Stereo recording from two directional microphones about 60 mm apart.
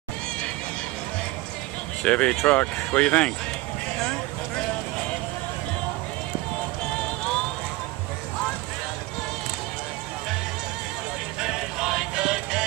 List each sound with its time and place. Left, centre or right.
2.0 s speech: left
11.4 s music: centre